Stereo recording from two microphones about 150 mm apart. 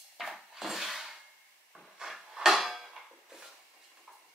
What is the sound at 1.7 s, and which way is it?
Drawer open or close, centre (ahead or behind).